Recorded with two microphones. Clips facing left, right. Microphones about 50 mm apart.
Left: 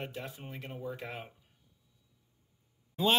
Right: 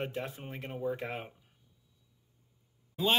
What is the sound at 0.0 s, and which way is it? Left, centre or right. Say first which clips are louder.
Speech: right 4 dB; right.